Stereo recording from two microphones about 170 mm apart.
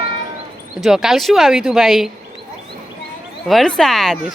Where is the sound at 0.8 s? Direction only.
Centre (ahead or behind).